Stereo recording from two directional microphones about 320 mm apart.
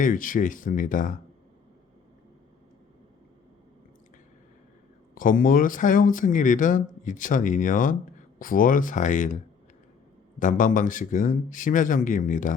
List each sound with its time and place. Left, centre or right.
0.0 s speech: left
5.1 s speech: left
10.4 s speech: left